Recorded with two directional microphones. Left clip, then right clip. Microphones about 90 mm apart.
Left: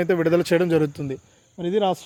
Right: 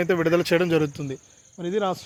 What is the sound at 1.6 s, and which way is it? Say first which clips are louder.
Speech: left 4 dB; 85° left.